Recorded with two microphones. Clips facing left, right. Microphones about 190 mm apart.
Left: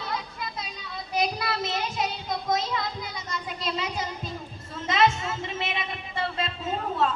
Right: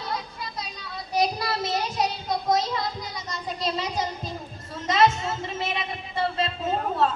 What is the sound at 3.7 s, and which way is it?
Child singing, 40° right (ahead or behind).